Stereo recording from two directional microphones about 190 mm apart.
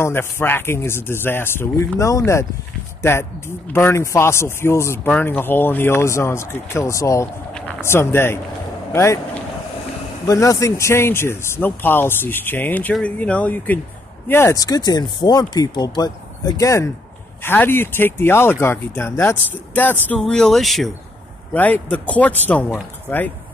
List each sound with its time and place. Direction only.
0.0 s speech: 10° left (ahead or behind)